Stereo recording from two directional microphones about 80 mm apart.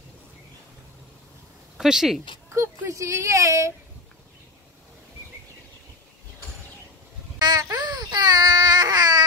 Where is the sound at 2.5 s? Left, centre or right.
Right.